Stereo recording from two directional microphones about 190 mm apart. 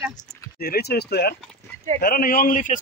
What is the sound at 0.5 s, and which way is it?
A man's voice, 55° left (ahead or behind).